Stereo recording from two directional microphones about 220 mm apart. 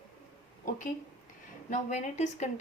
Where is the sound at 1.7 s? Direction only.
30° left (ahead or behind).